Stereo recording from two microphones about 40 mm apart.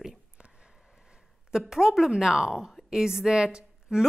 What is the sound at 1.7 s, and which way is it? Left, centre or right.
A woman's voice, centre.